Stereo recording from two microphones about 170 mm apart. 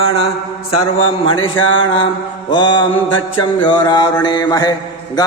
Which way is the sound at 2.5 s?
25° left (ahead or behind).